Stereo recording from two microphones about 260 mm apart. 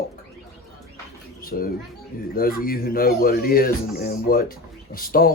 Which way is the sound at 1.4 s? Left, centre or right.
Left.